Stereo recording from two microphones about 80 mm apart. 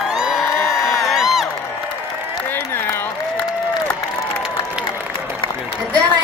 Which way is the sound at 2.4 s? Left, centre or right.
Left.